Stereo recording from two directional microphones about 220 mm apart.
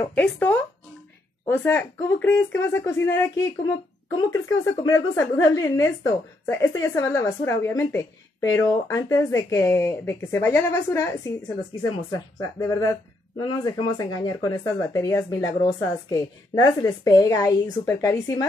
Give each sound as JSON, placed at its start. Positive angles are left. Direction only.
{"t": 0.1, "sound": "a woman's voice", "side_deg": 5}
{"t": 12.5, "sound": "a woman's voice", "side_deg": 15}